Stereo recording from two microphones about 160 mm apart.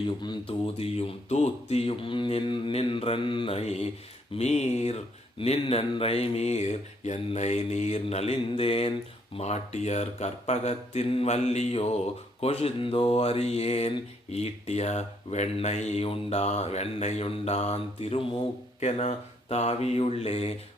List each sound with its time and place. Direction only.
0.2 s mantra: 30° left (ahead or behind)
4.4 s speech: 45° left (ahead or behind)
5.4 s mantra: 35° left (ahead or behind)
9.3 s speech: 45° left (ahead or behind)
12.4 s mantra: 40° left (ahead or behind)